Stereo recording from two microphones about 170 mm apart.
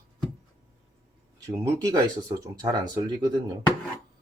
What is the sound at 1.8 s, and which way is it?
Speech, 20° right (ahead or behind).